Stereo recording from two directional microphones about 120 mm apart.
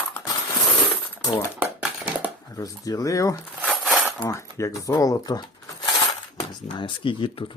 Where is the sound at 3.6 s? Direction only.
Centre (ahead or behind).